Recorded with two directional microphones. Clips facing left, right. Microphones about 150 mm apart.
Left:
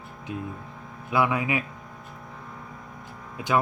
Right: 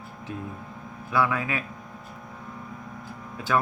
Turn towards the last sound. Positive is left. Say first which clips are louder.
# left 1 dB
turn(degrees=15)  # may be behind; listen again after turning